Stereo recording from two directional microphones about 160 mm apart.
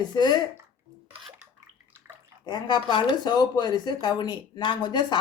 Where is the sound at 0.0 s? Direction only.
25° left (ahead or behind).